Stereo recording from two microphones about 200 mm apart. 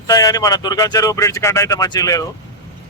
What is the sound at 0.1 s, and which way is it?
Speech, 20° left (ahead or behind).